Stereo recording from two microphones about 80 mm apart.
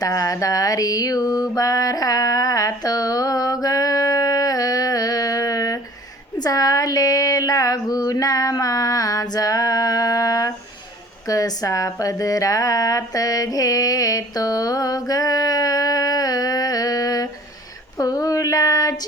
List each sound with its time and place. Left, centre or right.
0.0 s mantra: left
6.4 s a sound: left
17.9 s female singing: left